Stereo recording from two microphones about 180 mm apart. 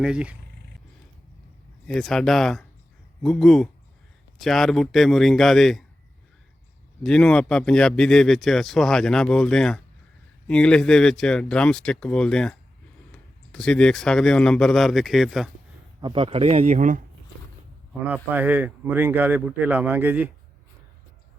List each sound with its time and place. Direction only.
0.0 s speech: 5° right (ahead or behind)
1.9 s speech: centre (ahead or behind)
7.0 s speech: 5° left (ahead or behind)
16.0 s speech: 25° right (ahead or behind); by 17.0 s 40° right (ahead or behind)
18.0 s speech: 10° right (ahead or behind)